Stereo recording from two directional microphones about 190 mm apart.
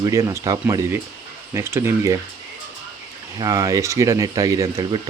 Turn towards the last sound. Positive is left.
turn(degrees=-15)  # may be behind; listen again after turning